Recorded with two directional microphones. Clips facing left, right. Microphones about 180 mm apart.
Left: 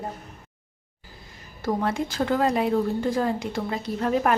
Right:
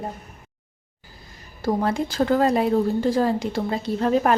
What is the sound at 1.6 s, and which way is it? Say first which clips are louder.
A woman's voice: right 3 dB; 35° right (ahead or behind).